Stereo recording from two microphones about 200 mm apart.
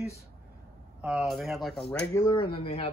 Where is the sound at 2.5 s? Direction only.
30° left (ahead or behind).